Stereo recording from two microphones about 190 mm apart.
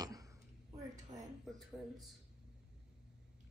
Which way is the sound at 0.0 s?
20° right (ahead or behind).